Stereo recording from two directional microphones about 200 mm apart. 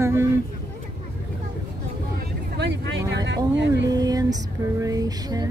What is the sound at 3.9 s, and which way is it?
Female singing, 20° right (ahead or behind).